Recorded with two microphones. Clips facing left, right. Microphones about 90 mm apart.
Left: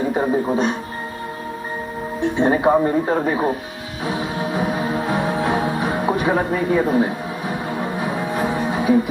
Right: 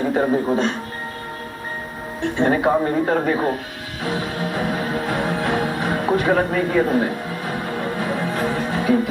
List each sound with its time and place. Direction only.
0.1 s a man's voice: 15° left (ahead or behind)
2.2 s speech: 20° left (ahead or behind)
4.0 s music: 20° left (ahead or behind)